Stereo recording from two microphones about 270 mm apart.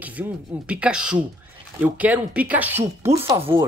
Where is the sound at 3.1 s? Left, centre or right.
Right.